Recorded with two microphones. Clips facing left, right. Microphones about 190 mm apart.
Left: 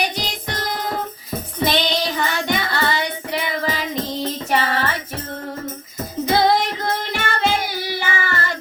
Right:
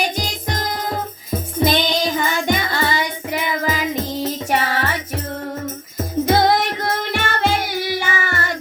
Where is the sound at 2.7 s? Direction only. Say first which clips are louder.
Right 1 dB; 60° left (ahead or behind).